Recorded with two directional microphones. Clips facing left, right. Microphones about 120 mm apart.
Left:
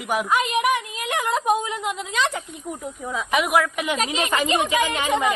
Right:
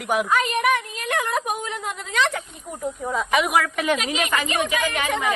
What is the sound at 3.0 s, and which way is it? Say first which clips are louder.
Speech: right 1 dB; centre (ahead or behind).